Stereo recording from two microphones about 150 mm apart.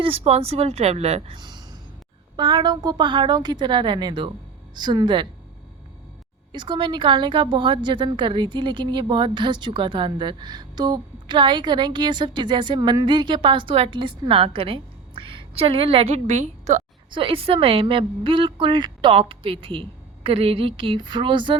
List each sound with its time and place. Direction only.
0.0 s speech: 40° right (ahead or behind)
1.4 s a sound: 30° right (ahead or behind)
2.3 s a woman's voice: 30° right (ahead or behind)
6.5 s a woman's voice: 30° right (ahead or behind); by 16.8 s 50° right (ahead or behind)
17.1 s a woman's voice: 35° right (ahead or behind)